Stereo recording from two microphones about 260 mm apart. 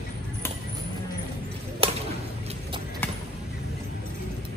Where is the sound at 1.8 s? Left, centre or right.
Right.